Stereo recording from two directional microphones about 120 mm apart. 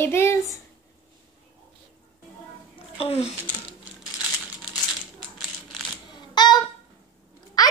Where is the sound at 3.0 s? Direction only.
60° left (ahead or behind).